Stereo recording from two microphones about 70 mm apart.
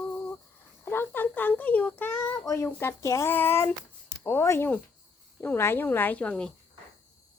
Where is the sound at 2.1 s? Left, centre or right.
Left.